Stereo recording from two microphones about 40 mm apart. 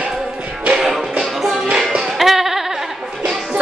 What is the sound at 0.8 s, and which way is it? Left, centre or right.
Music, centre.